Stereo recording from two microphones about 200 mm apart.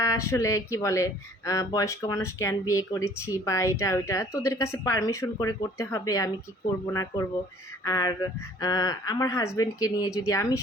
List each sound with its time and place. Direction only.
0.0 s speech: 15° left (ahead or behind)